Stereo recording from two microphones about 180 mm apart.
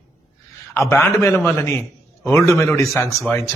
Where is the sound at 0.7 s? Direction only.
15° left (ahead or behind).